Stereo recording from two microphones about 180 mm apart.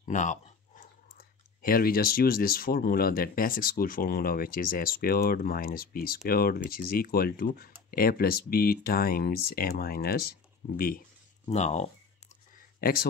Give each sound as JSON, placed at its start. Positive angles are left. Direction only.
{"t": 0.0, "sound": "speech", "side_deg": 45}
{"t": 11.4, "sound": "speech", "side_deg": 40}
{"t": 12.8, "sound": "speech", "side_deg": 55}